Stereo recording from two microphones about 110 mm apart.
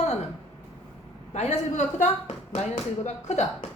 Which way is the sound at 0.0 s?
90° left.